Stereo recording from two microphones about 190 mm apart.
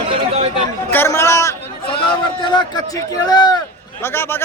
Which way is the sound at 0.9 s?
10° left (ahead or behind).